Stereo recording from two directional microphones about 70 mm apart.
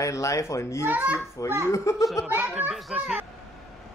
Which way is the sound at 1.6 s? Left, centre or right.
Left.